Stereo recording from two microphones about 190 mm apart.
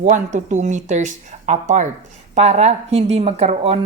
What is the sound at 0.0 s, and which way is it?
A woman's voice, 40° right (ahead or behind).